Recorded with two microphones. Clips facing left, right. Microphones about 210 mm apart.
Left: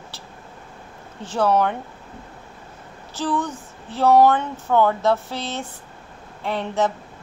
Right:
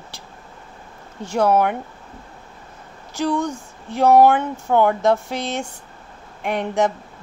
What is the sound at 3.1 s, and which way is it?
Speech, 15° right (ahead or behind).